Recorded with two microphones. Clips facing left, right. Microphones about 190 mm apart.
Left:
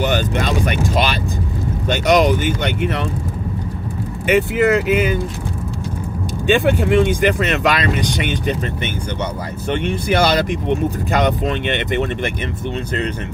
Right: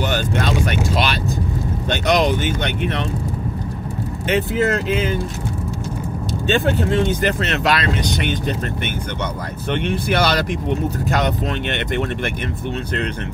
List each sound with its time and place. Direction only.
1.9 s speech: 10° left (ahead or behind)
4.3 s speech: 10° left (ahead or behind)
6.4 s speech: 15° left (ahead or behind)
11.6 s speech: 50° right (ahead or behind)